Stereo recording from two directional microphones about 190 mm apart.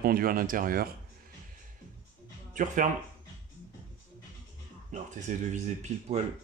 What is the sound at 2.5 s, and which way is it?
Speech, 40° right (ahead or behind).